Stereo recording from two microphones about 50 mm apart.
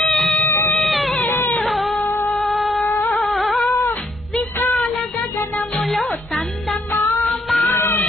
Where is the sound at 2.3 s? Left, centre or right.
Centre.